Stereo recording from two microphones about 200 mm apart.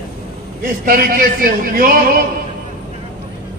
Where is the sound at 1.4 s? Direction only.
45° right (ahead or behind).